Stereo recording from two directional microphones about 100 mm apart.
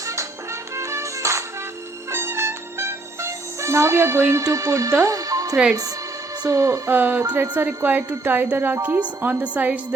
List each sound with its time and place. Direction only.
0.0 s music: 30° right (ahead or behind)
6.4 s a woman's voice: 30° right (ahead or behind); by 9.8 s 15° right (ahead or behind)